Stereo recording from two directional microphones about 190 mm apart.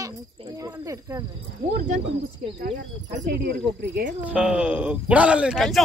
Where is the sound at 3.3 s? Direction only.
55° right (ahead or behind).